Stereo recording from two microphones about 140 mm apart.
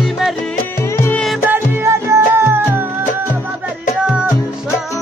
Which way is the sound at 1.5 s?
20° right (ahead or behind).